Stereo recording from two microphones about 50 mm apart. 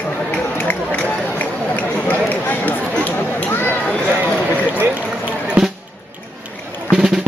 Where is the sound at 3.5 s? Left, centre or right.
Left.